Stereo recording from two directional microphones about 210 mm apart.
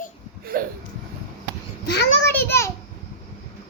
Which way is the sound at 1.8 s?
50° left (ahead or behind).